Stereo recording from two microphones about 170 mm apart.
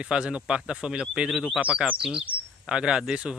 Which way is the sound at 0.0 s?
5° right (ahead or behind).